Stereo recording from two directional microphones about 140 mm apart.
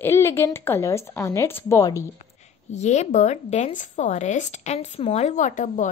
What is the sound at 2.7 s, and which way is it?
Speech, 55° left (ahead or behind).